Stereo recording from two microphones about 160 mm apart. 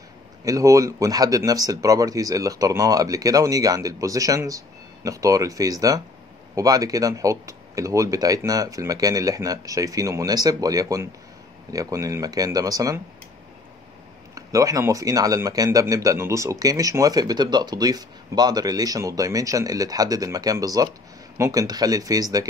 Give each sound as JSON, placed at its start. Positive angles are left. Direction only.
{"t": 0.5, "sound": "speech", "side_deg": -20}
{"t": 14.3, "sound": "speech", "side_deg": -20}